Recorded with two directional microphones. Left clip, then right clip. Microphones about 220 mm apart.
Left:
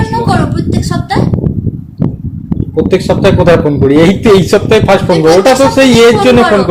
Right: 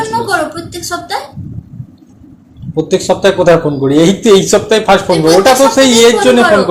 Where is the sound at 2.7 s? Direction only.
35° left (ahead or behind).